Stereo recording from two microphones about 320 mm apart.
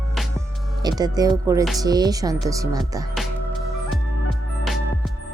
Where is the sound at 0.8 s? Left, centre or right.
Centre.